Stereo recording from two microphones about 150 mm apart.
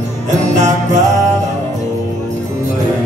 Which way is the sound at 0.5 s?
50° right (ahead or behind).